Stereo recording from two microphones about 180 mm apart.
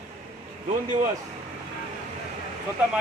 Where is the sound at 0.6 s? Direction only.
45° right (ahead or behind).